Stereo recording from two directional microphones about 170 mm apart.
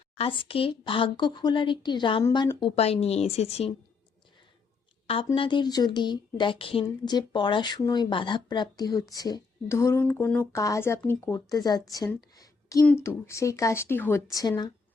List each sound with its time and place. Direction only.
0.2 s a woman's voice: 30° left (ahead or behind)
5.0 s speech: 35° left (ahead or behind)
11.9 s a sound: 20° left (ahead or behind)
12.8 s speech: 10° left (ahead or behind)